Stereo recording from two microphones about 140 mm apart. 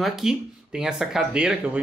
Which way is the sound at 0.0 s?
Centre (ahead or behind).